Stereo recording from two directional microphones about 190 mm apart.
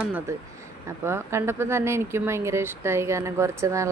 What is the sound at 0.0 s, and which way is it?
Speech, 10° right (ahead or behind).